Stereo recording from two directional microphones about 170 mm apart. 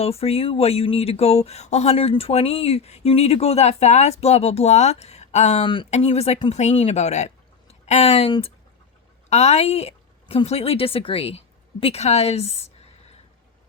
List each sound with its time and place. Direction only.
0.0 s speech: 35° left (ahead or behind)
5.6 s a woman's voice: 30° left (ahead or behind)